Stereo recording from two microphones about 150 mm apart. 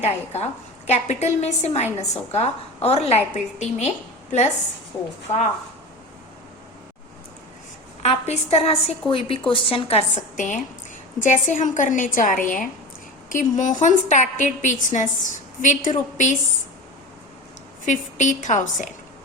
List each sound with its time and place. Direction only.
0.0 s a woman's voice: 45° left (ahead or behind)
8.0 s a woman's voice: 45° left (ahead or behind)
10.3 s a woman's voice: 55° left (ahead or behind)
17.8 s a woman's voice: 55° left (ahead or behind)